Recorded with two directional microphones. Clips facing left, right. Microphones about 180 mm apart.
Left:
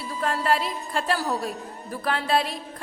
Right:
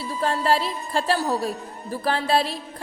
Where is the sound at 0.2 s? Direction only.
30° right (ahead or behind).